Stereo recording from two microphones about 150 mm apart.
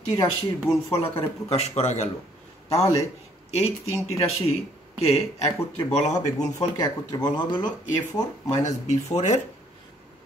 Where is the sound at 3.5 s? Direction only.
45° left (ahead or behind).